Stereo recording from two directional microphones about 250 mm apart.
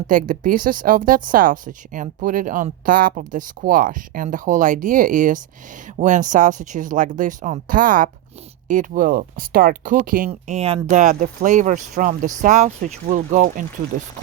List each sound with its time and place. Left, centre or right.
0.1 s speech: right